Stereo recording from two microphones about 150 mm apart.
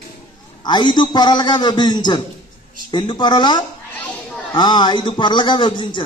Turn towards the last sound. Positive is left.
turn(degrees=30)  # may be behind; listen again after turning